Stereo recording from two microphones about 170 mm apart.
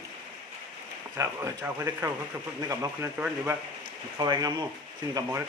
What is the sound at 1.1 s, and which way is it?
Speech, 15° right (ahead or behind).